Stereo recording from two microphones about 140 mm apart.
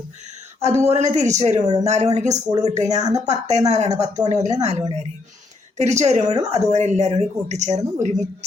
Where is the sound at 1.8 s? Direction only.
55° right (ahead or behind).